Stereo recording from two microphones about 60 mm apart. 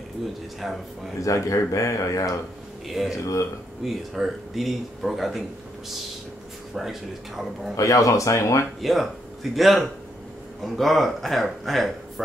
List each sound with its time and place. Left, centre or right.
0.6 s speech: centre
1.2 s speech: left
2.9 s speech: centre
6.7 s speech: centre
7.7 s speech: left
8.8 s speech: centre